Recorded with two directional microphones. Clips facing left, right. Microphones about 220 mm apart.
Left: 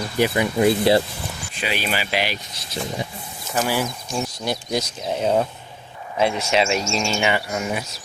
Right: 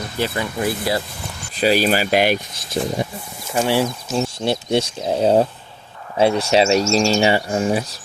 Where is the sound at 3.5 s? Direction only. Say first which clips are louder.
Right 4 dB; 25° right (ahead or behind).